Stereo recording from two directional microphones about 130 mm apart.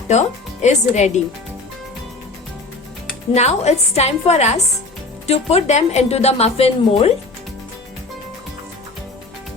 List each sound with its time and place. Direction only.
0.1 s a woman's voice: 60° left (ahead or behind)
3.3 s a woman's voice: 60° left (ahead or behind)